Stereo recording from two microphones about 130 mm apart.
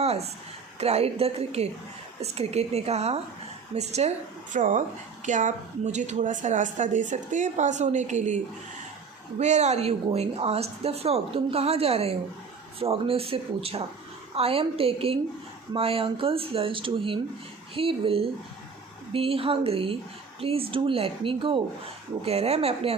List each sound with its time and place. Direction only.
0.0 s a sound: 55° right (ahead or behind)
0.8 s a woman's voice: 55° right (ahead or behind)
4.5 s a woman's voice: 75° right (ahead or behind)
9.4 s speech: 60° right (ahead or behind)